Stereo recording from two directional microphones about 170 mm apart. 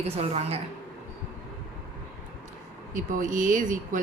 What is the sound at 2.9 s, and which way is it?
Speech, 50° right (ahead or behind).